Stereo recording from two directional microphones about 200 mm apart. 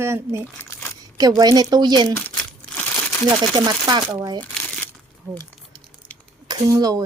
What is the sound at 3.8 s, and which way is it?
Speech, 20° right (ahead or behind).